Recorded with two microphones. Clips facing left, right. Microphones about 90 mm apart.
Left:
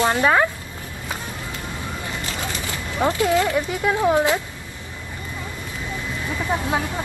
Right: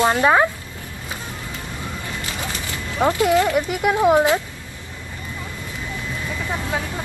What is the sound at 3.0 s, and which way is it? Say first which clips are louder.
Speech: right 2 dB; 20° right (ahead or behind).